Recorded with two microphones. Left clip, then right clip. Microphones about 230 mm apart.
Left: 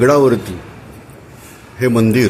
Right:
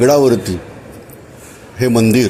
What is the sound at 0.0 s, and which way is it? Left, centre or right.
Speech, centre.